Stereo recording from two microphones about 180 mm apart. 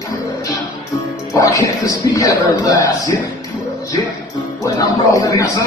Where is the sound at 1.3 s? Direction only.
20° left (ahead or behind).